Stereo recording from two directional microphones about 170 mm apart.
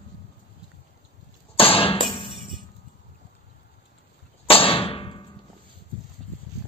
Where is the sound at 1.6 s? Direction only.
30° left (ahead or behind).